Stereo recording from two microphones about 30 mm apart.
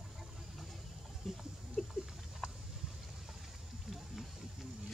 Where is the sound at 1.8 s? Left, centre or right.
Centre.